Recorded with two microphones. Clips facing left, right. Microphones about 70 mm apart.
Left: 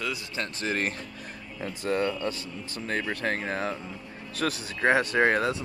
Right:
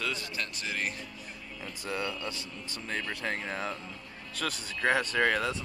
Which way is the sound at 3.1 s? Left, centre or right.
Left.